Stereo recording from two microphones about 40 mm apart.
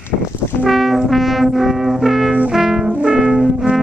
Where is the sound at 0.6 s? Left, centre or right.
Centre.